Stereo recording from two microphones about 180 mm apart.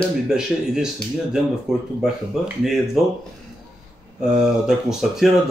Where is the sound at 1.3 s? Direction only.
5° right (ahead or behind).